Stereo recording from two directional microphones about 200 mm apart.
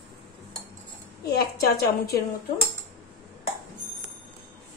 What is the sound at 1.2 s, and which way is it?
Speech, 50° left (ahead or behind).